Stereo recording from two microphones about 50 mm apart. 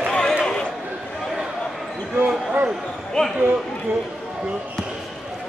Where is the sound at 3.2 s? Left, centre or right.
Centre.